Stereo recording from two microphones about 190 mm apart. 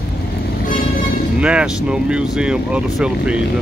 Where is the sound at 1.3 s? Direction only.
5° right (ahead or behind).